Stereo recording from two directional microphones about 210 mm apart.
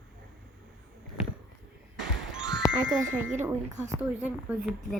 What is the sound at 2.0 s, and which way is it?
Music, 5° right (ahead or behind).